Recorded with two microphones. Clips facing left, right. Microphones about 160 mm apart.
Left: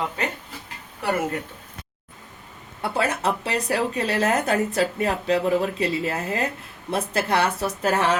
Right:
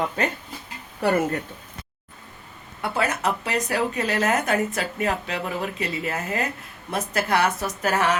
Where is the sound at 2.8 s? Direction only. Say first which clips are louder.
Left 1 dB; 30° left (ahead or behind).